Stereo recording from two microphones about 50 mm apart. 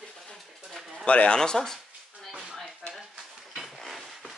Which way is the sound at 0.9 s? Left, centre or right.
Left.